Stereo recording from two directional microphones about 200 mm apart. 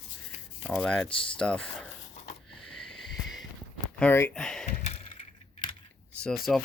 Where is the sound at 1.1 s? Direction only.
25° left (ahead or behind).